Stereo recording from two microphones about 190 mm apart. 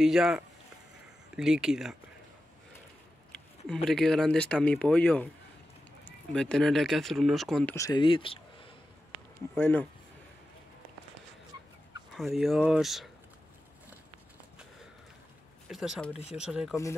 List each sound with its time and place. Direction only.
0.0 s speech: centre (ahead or behind)
3.3 s speech: centre (ahead or behind)
7.7 s speech: 20° left (ahead or behind)
9.6 s speech: 10° left (ahead or behind)
12.2 s speech: centre (ahead or behind)
15.7 s speech: centre (ahead or behind)